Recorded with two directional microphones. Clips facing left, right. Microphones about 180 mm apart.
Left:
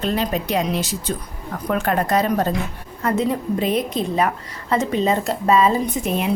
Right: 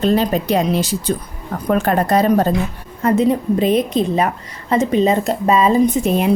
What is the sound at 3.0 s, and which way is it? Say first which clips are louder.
A woman's voice: right 6 dB; 25° right (ahead or behind).